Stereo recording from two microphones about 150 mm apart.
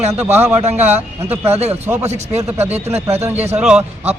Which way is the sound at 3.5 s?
5° right (ahead or behind).